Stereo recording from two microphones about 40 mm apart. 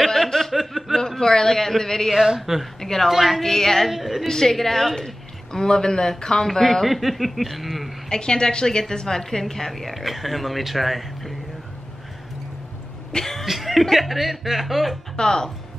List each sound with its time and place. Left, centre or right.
0.0 s chuckle: centre
1.0 s a woman's voice: centre
2.1 s speech: centre
2.8 s a woman's voice: centre
3.1 s a woman's voice: centre
3.4 s a woman's voice: centre
3.9 s a woman's voice: centre
4.3 s a woman's voice: centre
8.1 s a woman's voice: left; by 11.3 s centre
13.1 s a woman's voice: centre
15.1 s a woman's voice: centre